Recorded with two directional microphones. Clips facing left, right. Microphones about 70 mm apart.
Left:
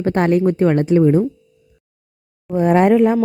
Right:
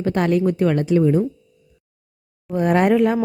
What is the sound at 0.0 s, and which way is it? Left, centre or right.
A woman's voice, left.